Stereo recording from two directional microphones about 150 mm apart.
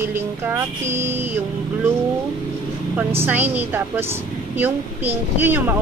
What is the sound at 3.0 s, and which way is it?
Speech, 15° right (ahead or behind).